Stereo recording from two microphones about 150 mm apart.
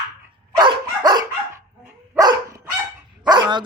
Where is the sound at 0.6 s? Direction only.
30° right (ahead or behind).